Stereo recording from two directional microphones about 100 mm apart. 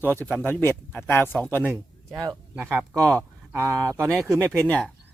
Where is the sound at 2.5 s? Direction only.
20° right (ahead or behind).